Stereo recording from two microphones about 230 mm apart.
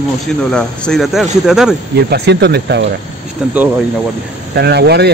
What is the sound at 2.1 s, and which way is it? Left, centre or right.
Speech, right.